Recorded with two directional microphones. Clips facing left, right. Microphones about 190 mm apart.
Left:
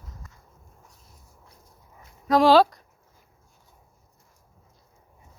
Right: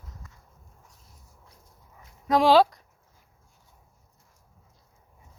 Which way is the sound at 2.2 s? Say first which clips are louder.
Left 2 dB; 20° right (ahead or behind).